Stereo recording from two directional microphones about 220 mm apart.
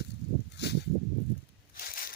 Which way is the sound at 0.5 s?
50° left (ahead or behind).